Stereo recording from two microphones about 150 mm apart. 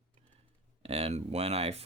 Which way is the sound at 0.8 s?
40° right (ahead or behind).